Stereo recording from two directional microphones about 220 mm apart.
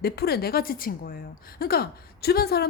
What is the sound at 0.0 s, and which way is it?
A woman's voice, 45° left (ahead or behind).